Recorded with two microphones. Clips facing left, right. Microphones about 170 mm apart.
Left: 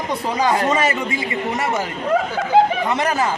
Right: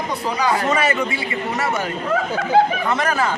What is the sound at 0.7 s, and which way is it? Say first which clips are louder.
A man's voice: even; 20° left (ahead or behind).